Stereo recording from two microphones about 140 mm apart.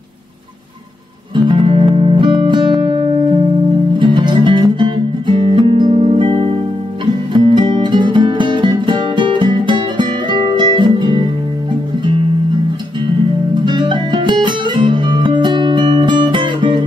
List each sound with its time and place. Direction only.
1.3 s music: 35° right (ahead or behind)
13.7 s music: 35° right (ahead or behind)